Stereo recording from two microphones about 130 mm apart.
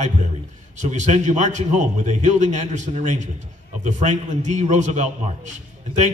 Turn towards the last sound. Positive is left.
turn(degrees=-65)  # may be behind; listen again after turning